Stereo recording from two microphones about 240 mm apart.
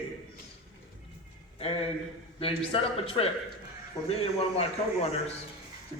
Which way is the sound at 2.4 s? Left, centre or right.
Left.